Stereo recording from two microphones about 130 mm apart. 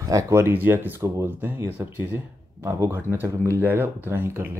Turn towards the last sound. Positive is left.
turn(degrees=-15)  # may be behind; listen again after turning